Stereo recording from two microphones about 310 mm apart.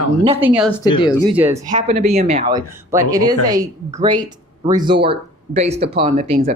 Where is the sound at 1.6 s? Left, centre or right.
Right.